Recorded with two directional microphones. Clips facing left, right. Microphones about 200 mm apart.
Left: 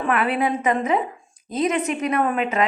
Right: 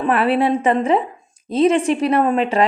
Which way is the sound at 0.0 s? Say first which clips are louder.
Right 5 dB; 30° right (ahead or behind).